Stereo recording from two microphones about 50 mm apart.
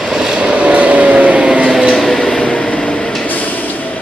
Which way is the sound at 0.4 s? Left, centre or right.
Right.